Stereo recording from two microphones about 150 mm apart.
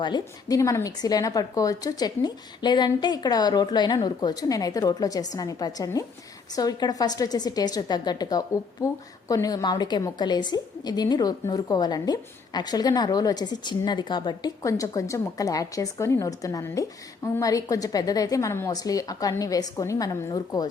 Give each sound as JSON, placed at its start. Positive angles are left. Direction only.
{"t": 0.0, "sound": "a woman's voice", "side_deg": 25}